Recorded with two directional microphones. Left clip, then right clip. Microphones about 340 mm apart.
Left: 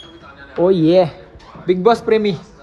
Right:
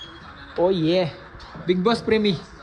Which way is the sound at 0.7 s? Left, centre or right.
Centre.